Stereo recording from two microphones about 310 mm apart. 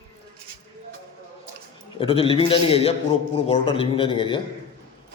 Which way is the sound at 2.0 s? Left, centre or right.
Centre.